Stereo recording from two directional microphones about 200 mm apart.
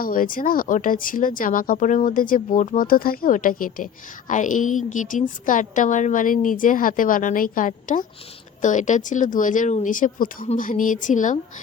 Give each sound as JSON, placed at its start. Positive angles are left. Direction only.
{"t": 0.0, "sound": "a woman's voice", "side_deg": 45}